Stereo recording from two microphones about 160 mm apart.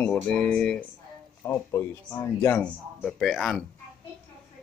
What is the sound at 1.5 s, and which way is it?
Speech, 15° left (ahead or behind).